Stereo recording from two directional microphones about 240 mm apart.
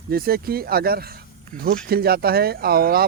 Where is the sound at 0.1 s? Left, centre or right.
Right.